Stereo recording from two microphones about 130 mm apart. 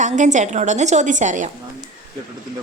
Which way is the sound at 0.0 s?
70° right (ahead or behind).